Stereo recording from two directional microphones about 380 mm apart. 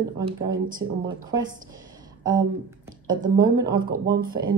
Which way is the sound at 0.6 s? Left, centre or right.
Right.